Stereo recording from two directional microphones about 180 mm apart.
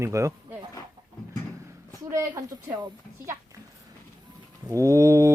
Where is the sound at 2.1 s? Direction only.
20° right (ahead or behind).